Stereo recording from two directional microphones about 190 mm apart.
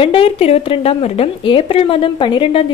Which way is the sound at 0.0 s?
30° left (ahead or behind).